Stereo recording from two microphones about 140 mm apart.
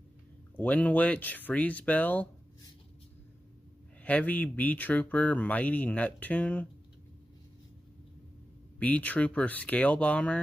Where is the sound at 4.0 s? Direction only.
10° left (ahead or behind).